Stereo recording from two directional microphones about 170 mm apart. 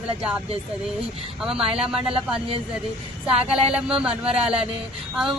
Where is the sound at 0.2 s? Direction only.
5° right (ahead or behind).